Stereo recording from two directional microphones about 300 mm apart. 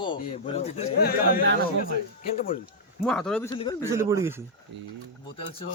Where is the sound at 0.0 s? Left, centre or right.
Centre.